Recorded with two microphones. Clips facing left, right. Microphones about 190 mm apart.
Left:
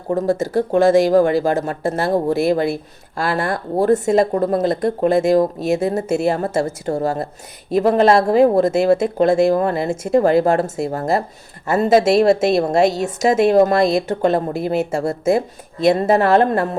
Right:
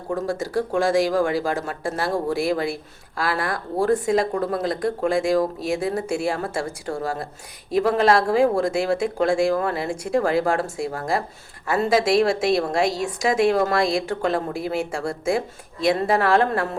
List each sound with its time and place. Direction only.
0.3 s speech: 20° left (ahead or behind)